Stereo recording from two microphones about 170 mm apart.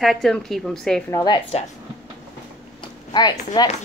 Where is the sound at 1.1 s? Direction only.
25° left (ahead or behind).